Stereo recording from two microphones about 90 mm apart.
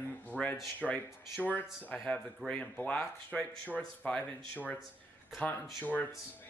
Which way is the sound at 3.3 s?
5° left (ahead or behind).